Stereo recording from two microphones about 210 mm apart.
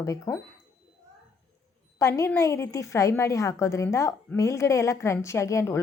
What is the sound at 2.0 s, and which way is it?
A woman's voice, 10° left (ahead or behind).